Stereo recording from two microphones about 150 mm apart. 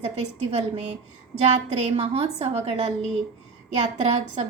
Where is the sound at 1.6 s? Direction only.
45° right (ahead or behind).